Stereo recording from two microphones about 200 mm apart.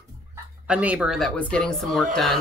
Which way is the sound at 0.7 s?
5° right (ahead or behind).